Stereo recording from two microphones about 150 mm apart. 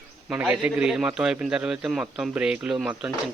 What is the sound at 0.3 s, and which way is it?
A man's voice, 10° right (ahead or behind).